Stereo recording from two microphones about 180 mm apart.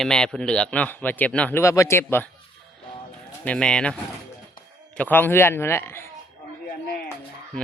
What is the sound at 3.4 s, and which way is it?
Speech, 5° left (ahead or behind).